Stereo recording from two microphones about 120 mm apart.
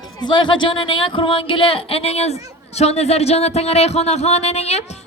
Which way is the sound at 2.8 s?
65° left (ahead or behind).